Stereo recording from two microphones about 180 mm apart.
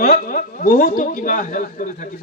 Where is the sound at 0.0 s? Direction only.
55° left (ahead or behind).